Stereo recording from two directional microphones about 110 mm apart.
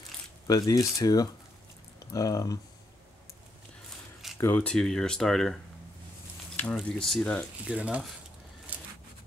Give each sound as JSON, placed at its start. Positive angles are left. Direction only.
{"t": 0.5, "sound": "speech", "side_deg": 30}
{"t": 4.4, "sound": "speech", "side_deg": 20}
{"t": 4.6, "sound": "speech", "side_deg": 5}
{"t": 7.6, "sound": "speech", "side_deg": -10}
{"t": 8.7, "sound": "a sound", "side_deg": -15}